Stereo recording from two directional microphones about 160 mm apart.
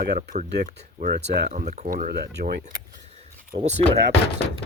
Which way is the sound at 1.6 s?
45° right (ahead or behind).